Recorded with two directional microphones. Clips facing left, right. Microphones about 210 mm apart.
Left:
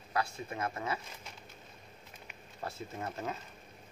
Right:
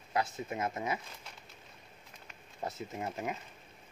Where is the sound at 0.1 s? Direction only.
20° right (ahead or behind).